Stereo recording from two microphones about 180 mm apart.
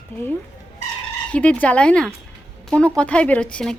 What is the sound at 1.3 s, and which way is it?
A woman's voice, 5° left (ahead or behind).